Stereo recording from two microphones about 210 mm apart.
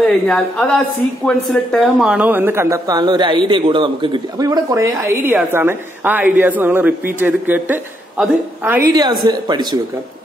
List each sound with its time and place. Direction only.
0.0 s a woman's voice: 5° left (ahead or behind); by 9.8 s 20° right (ahead or behind)